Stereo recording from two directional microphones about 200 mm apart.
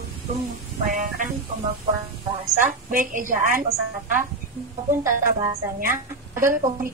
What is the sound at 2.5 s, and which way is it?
A woman's voice, 40° right (ahead or behind).